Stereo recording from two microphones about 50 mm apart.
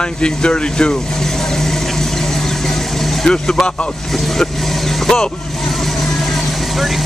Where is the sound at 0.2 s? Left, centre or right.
Centre.